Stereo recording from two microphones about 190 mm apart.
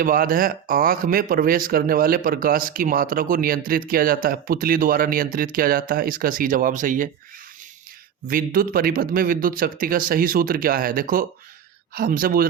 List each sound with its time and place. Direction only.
0.0 s speech: 50° right (ahead or behind)
8.3 s speech: 50° right (ahead or behind)